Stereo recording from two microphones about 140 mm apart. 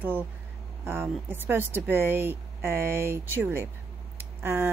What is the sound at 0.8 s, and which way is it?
Speech, 15° right (ahead or behind).